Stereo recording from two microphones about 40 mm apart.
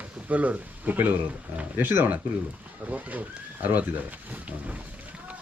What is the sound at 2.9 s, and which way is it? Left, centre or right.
Speech, right.